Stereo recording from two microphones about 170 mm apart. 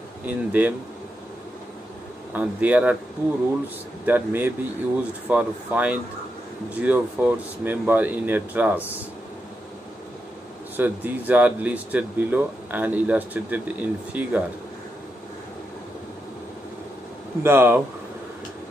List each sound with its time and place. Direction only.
0.3 s speech: 10° right (ahead or behind)
2.3 s speech: 10° right (ahead or behind)
4.0 s speech: 10° right (ahead or behind)
10.8 s speech: 10° right (ahead or behind)
17.4 s speech: 15° right (ahead or behind)